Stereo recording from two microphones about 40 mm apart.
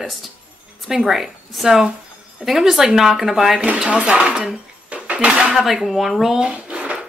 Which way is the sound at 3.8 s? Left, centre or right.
Right.